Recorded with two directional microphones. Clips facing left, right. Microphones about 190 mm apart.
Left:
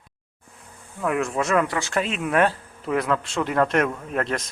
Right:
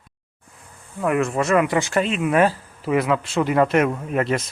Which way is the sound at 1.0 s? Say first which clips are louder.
Right 3 dB; centre (ahead or behind).